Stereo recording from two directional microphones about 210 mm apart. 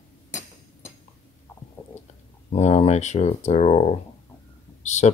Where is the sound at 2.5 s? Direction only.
30° left (ahead or behind).